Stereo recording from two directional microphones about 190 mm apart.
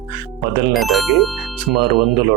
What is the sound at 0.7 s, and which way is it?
Speech, centre (ahead or behind).